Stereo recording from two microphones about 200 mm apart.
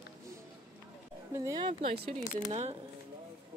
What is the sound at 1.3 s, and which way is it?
Speech, 15° right (ahead or behind).